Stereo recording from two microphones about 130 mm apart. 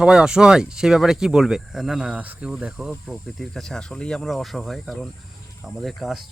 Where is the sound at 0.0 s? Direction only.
5° right (ahead or behind).